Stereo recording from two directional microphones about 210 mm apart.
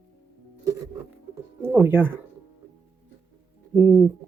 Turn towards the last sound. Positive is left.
turn(degrees=-10)  # may be behind; listen again after turning